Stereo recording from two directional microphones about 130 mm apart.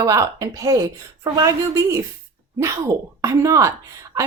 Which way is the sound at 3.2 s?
25° right (ahead or behind).